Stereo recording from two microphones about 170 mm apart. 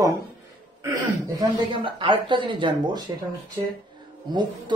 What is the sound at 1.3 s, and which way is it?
Speech, 25° right (ahead or behind).